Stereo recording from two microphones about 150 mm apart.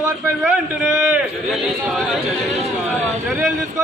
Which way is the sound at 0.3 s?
10° right (ahead or behind).